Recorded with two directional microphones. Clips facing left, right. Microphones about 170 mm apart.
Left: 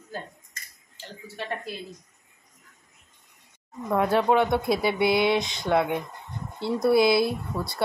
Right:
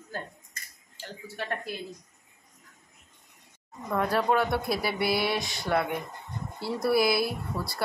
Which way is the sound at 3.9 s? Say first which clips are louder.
Left 4 dB; 25° left (ahead or behind).